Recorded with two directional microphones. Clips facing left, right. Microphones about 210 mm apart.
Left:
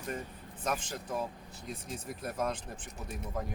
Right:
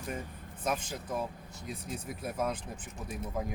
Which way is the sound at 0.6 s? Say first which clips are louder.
Right 1 dB; 10° right (ahead or behind).